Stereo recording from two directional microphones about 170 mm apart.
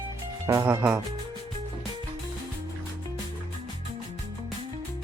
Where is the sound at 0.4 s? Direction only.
15° right (ahead or behind).